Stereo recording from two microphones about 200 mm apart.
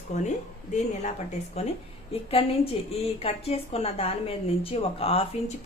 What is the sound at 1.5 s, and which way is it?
A woman's voice, 30° left (ahead or behind).